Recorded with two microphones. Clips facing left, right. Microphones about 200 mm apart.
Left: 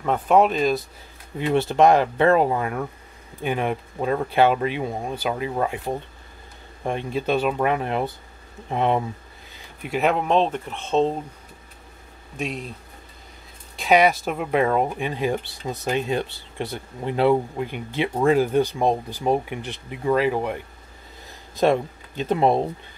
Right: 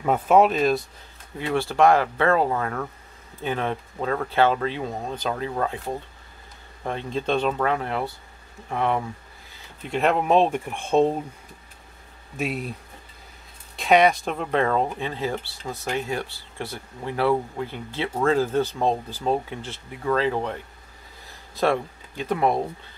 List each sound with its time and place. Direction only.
0.0 s speech: 5° right (ahead or behind)
1.4 s speech: 20° left (ahead or behind)
9.8 s speech: 5° left (ahead or behind)
12.4 s speech: 5° right (ahead or behind)
13.7 s speech: centre (ahead or behind); by 22.7 s 25° left (ahead or behind)